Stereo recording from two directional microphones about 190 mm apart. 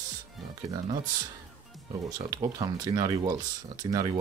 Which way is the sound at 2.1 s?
20° right (ahead or behind).